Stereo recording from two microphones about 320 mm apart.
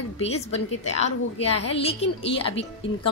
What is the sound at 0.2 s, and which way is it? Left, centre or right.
Speech, centre.